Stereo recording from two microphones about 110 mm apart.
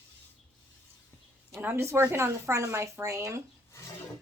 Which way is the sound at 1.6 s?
25° right (ahead or behind).